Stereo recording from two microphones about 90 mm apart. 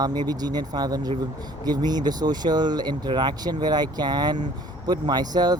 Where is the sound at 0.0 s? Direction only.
50° right (ahead or behind).